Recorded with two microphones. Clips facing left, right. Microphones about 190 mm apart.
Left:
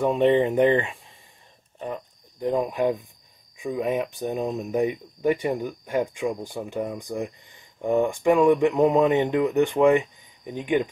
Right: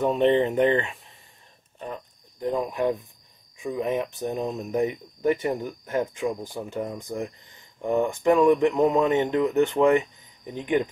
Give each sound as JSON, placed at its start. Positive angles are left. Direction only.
{"t": 0.0, "sound": "speech", "side_deg": 10}
{"t": 2.4, "sound": "speech", "side_deg": 15}